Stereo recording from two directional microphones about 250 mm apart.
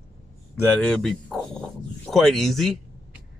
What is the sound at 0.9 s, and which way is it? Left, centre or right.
Speech, centre.